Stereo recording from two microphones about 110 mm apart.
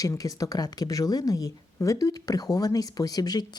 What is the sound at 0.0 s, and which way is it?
A woman's voice, 35° left (ahead or behind).